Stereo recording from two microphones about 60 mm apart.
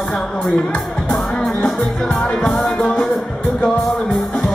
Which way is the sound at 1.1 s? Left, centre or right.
Centre.